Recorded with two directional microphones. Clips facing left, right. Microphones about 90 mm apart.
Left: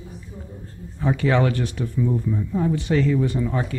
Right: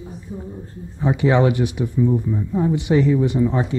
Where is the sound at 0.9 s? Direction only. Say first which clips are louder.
Right 3 dB; 20° right (ahead or behind).